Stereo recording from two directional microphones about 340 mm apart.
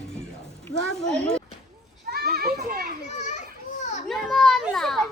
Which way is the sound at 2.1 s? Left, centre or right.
Right.